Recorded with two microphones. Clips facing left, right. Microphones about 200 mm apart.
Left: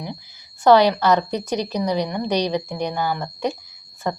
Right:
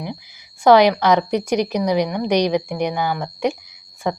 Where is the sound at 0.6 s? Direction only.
15° right (ahead or behind).